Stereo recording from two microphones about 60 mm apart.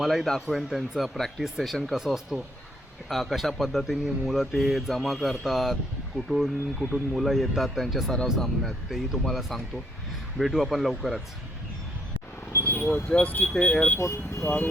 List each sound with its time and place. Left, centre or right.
0.0 s speech: centre
12.6 s vehicle: left
13.2 s speech: left
14.0 s speech: left